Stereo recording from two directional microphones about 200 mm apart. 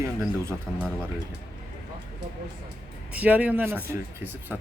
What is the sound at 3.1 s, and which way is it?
Speech, 5° right (ahead or behind).